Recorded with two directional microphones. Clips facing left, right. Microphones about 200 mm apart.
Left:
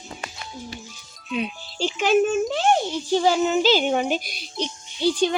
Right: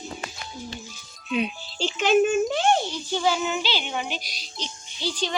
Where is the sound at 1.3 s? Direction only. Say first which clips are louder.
Right 1 dB; centre (ahead or behind).